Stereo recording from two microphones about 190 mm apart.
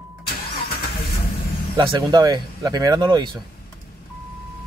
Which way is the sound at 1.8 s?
25° right (ahead or behind).